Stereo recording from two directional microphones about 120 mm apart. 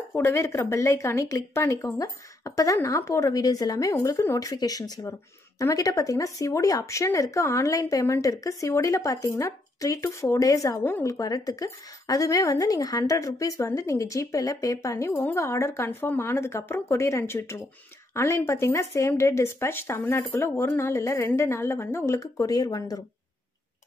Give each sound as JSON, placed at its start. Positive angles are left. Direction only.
{"t": 0.1, "sound": "speech", "side_deg": 20}